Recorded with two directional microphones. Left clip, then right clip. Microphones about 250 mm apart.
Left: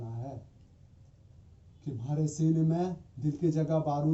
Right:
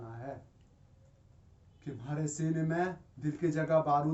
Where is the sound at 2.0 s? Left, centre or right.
Centre.